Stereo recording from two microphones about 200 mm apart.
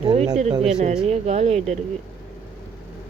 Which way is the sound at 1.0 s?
35° right (ahead or behind).